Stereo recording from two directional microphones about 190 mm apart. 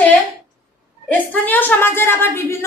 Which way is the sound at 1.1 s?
10° left (ahead or behind).